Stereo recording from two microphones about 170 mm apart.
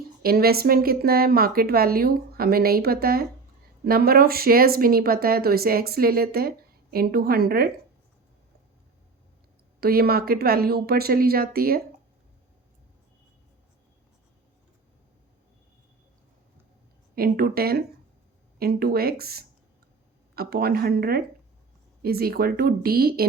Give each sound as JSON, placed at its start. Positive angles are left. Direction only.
{"t": 0.2, "sound": "speech", "side_deg": -60}
{"t": 9.8, "sound": "speech", "side_deg": -65}
{"t": 17.2, "sound": "speech", "side_deg": -60}